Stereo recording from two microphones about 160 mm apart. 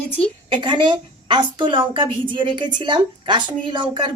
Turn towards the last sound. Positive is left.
turn(degrees=-30)  # may be behind; listen again after turning